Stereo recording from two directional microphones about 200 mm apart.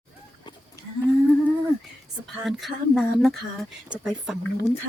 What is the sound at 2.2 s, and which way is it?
Speech, centre (ahead or behind).